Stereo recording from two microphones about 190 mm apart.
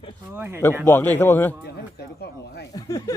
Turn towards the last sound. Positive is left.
turn(degrees=20)  # may be behind; listen again after turning